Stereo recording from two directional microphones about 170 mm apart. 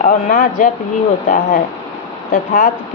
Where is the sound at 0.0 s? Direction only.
50° left (ahead or behind).